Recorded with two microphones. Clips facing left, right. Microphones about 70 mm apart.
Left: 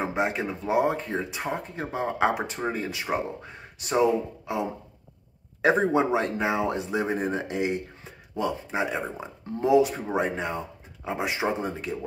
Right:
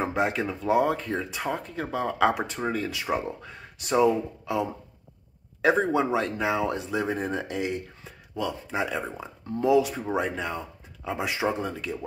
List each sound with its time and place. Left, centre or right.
0.0 s speech: left